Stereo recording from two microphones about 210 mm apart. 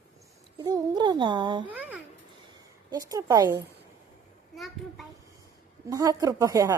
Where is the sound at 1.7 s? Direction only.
10° right (ahead or behind).